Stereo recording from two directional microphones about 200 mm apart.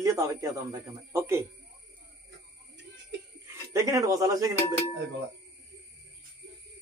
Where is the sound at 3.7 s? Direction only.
15° right (ahead or behind).